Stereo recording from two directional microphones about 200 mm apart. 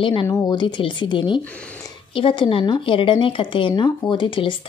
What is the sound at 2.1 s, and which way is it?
Speech, 25° left (ahead or behind).